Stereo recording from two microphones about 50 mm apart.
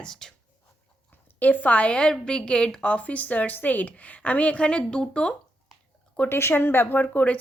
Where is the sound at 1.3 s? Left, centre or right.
Left; by 5.4 s centre.